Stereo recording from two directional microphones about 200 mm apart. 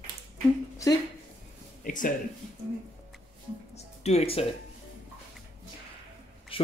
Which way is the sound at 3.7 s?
30° left (ahead or behind).